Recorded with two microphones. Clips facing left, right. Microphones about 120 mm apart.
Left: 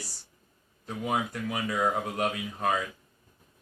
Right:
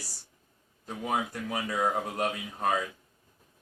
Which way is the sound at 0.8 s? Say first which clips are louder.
Left 1 dB; 35° right (ahead or behind).